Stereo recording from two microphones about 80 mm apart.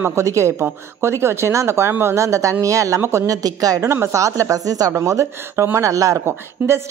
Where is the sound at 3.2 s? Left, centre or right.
Right.